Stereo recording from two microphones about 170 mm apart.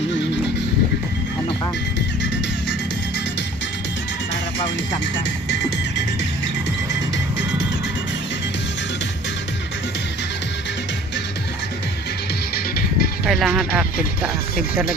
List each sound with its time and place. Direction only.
12.5 s music: 65° left (ahead or behind)
13.2 s speech: centre (ahead or behind)